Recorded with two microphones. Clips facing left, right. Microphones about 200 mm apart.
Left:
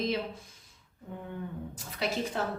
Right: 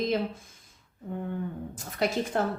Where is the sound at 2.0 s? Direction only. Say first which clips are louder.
Right 5 dB; 50° right (ahead or behind).